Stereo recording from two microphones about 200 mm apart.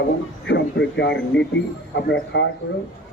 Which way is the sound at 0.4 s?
60° left (ahead or behind).